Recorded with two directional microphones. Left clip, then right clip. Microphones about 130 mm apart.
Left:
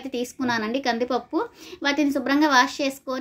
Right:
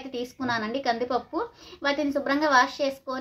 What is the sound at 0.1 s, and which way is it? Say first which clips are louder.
A woman's voice: left 3 dB; 25° left (ahead or behind).